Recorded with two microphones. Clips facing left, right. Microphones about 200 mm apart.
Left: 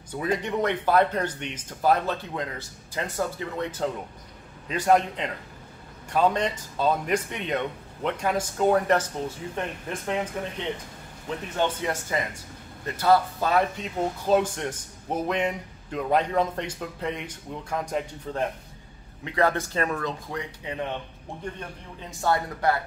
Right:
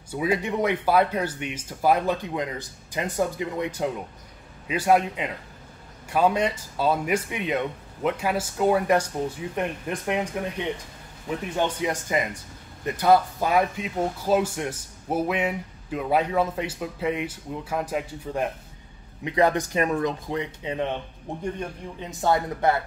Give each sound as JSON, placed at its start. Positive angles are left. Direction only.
{"t": 0.1, "sound": "speech", "side_deg": -10}
{"t": 11.2, "sound": "speech", "side_deg": -10}